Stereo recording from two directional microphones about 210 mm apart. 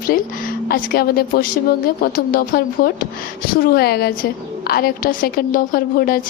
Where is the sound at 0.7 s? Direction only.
45° left (ahead or behind).